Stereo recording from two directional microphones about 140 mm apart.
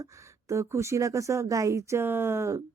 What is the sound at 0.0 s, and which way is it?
Speech, 20° right (ahead or behind).